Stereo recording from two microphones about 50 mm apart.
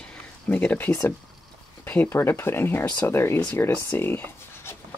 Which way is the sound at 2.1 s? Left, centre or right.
Left.